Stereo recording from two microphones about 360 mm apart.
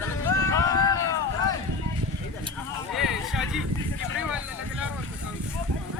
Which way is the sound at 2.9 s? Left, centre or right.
Centre.